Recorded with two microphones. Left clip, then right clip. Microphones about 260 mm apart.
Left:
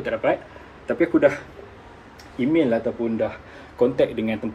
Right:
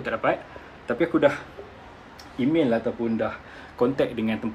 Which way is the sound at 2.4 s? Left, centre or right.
Centre.